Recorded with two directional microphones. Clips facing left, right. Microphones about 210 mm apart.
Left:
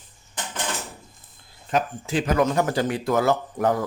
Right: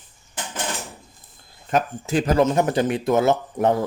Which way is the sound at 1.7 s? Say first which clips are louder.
Right 3 dB; 45° right (ahead or behind).